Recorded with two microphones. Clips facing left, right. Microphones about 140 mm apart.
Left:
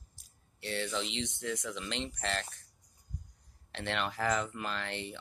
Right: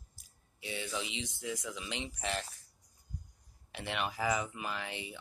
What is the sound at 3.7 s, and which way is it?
Speech, 10° right (ahead or behind).